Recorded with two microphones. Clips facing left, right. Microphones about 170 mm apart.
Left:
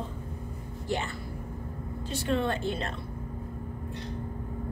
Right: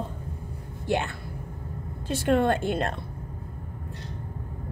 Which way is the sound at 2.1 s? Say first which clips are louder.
Right 6 dB; 55° right (ahead or behind).